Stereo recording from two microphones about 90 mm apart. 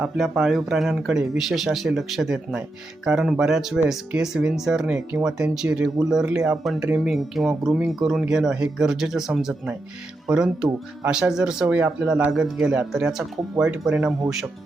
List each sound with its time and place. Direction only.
0.0 s speech: 5° right (ahead or behind)
11.6 s speech: 20° right (ahead or behind)
12.3 s speech: 5° right (ahead or behind)